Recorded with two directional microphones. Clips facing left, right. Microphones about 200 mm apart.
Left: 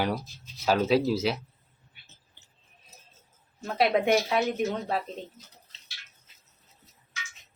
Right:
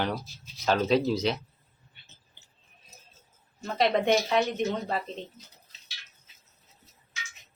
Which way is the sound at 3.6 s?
5° left (ahead or behind).